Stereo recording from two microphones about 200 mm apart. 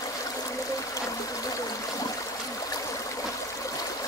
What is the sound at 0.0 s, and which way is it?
Stream, 15° left (ahead or behind).